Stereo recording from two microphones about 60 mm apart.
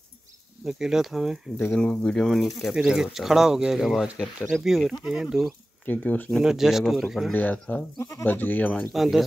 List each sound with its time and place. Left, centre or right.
0.7 s speech: centre
1.8 s speech: centre
2.2 s speech: centre
2.7 s speech: centre
5.9 s speech: left
6.4 s speech: centre
7.3 s speech: left
8.9 s speech: centre